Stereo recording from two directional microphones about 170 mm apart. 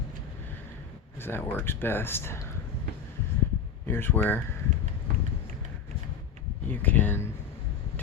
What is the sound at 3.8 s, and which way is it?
Speech, 10° left (ahead or behind).